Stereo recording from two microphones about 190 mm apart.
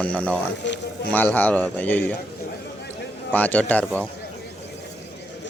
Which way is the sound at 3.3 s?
10° left (ahead or behind).